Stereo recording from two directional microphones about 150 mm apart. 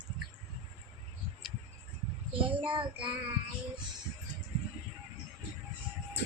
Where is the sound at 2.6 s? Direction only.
35° right (ahead or behind).